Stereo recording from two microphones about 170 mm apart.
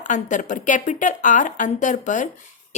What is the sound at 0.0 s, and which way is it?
A woman's voice, 45° left (ahead or behind).